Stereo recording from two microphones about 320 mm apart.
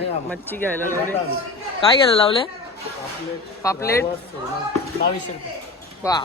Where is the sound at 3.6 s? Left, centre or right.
Centre.